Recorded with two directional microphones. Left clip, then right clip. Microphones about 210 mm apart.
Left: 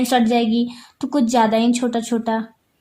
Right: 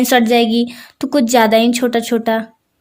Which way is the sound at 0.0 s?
40° right (ahead or behind).